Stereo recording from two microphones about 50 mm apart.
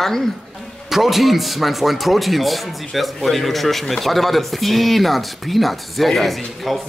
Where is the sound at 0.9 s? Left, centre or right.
Centre.